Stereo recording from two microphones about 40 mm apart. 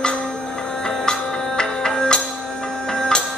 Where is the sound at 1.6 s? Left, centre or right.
Centre.